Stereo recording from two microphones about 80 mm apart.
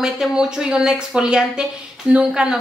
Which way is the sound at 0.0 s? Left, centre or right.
Centre.